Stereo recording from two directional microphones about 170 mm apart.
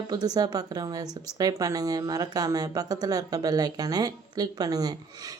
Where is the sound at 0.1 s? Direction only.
25° right (ahead or behind).